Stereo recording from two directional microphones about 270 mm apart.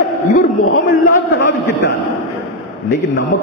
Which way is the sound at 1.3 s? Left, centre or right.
Left.